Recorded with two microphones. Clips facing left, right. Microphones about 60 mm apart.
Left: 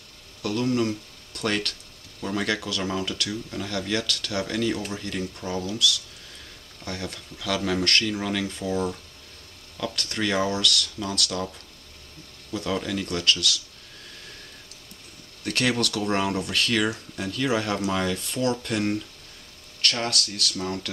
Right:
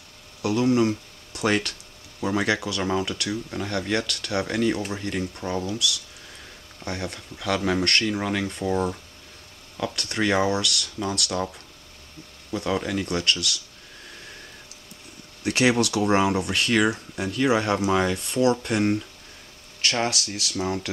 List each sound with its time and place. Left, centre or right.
0.4 s speech: centre
15.4 s speech: centre